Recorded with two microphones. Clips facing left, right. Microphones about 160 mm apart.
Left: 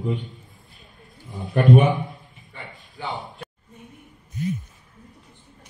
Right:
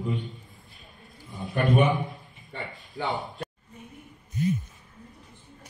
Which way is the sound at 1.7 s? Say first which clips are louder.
Left 1 dB; centre (ahead or behind).